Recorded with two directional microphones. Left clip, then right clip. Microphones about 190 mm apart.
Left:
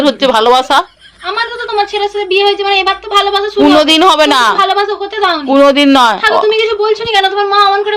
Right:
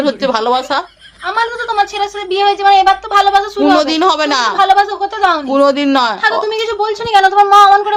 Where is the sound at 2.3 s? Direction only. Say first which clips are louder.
Right 2 dB; 20° right (ahead or behind).